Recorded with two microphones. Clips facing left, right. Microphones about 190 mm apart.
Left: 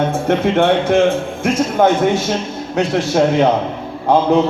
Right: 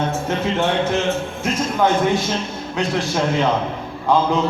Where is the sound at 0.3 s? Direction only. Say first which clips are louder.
Left 9 dB; 55° left (ahead or behind).